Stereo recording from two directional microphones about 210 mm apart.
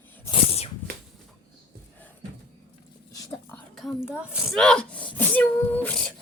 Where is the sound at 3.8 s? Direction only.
Centre (ahead or behind).